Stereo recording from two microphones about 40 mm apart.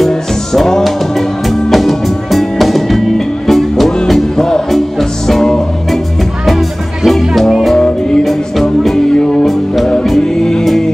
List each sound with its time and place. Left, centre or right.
0.5 s music: centre
0.8 s music: centre
7.1 s music: centre
7.7 s music: centre
8.2 s music: centre
8.9 s music: centre